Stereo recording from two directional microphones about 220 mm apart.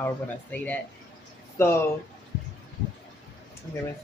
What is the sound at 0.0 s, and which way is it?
Speech, 5° left (ahead or behind).